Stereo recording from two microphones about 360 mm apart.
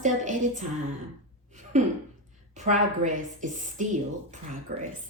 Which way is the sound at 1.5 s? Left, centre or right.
Centre.